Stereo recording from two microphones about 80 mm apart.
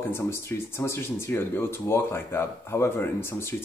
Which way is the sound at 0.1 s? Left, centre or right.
Left.